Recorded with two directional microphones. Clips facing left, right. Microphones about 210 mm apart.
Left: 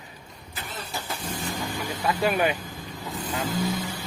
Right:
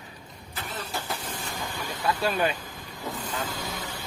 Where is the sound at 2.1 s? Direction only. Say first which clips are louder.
Left 2 dB; 15° left (ahead or behind).